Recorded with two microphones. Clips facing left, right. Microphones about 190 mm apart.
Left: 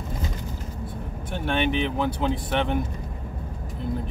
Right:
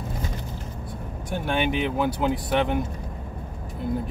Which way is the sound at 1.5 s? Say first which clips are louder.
Even; 10° right (ahead or behind).